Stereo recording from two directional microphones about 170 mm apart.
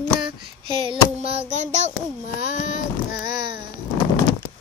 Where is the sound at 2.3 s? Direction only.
45° left (ahead or behind).